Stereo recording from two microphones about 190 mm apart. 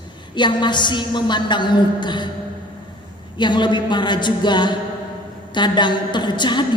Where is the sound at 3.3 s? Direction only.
25° left (ahead or behind).